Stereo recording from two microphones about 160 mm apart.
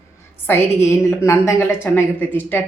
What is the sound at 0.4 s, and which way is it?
A woman's voice, 15° left (ahead or behind).